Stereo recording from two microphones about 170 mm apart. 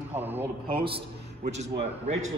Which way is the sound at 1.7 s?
40° right (ahead or behind).